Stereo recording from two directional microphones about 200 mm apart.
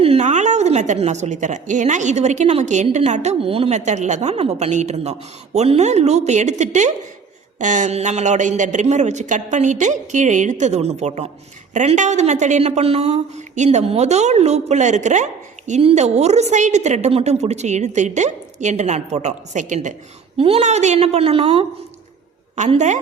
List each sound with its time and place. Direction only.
0.0 s a woman's voice: 35° right (ahead or behind)